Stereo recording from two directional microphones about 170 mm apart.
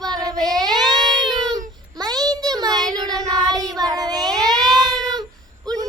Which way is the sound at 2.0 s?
25° right (ahead or behind).